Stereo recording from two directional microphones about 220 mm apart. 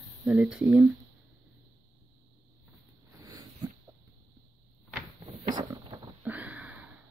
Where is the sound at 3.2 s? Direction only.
15° right (ahead or behind).